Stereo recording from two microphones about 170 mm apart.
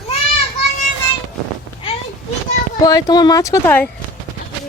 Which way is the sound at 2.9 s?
20° left (ahead or behind).